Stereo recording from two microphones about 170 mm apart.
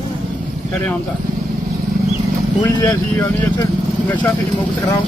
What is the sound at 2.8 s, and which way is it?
Speech, 15° left (ahead or behind).